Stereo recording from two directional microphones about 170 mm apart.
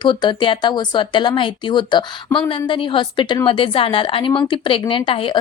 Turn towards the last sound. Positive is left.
turn(degrees=30)  # may be behind; listen again after turning